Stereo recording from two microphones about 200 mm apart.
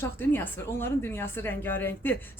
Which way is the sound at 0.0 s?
10° left (ahead or behind).